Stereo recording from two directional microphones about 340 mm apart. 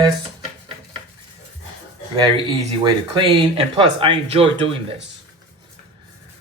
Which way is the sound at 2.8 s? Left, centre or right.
Centre.